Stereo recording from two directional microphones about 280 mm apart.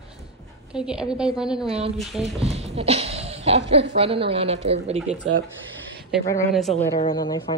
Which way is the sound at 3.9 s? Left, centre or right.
Centre.